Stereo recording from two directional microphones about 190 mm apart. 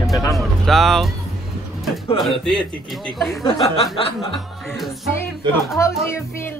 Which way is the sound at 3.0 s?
Centre (ahead or behind).